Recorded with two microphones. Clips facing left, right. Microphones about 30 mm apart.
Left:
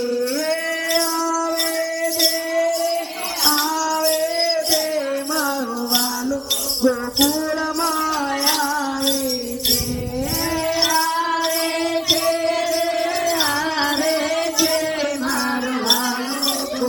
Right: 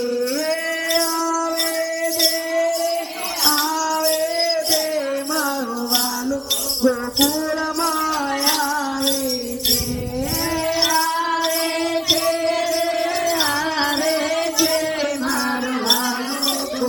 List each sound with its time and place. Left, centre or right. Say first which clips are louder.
6.8 s music: even; left